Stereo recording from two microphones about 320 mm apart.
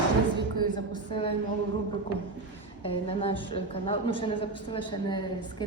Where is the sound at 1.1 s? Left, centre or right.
Centre.